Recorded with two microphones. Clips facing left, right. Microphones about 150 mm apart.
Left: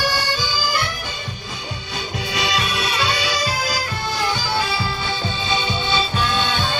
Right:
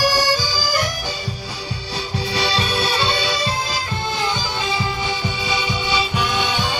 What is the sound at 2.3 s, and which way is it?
Music, 30° right (ahead or behind).